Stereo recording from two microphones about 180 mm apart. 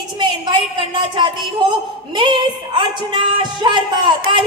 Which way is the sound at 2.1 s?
25° right (ahead or behind).